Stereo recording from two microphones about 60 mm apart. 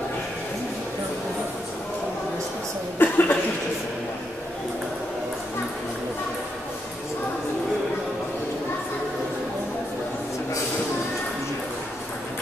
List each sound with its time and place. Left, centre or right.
3.0 s cough: left